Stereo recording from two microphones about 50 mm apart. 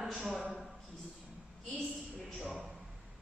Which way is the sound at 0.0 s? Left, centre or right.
Centre.